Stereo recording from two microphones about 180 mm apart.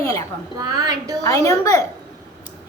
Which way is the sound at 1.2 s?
20° left (ahead or behind).